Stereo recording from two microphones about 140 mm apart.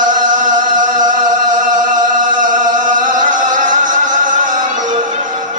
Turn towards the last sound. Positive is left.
turn(degrees=-65)  # may be behind; listen again after turning